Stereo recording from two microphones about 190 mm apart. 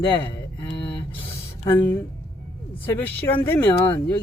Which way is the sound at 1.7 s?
10° left (ahead or behind).